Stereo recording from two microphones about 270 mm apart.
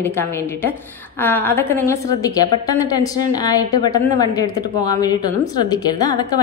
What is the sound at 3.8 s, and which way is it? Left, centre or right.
A woman's voice, centre.